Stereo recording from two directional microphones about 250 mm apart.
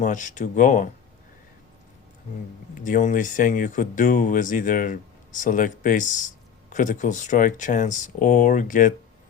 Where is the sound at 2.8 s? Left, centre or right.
Left.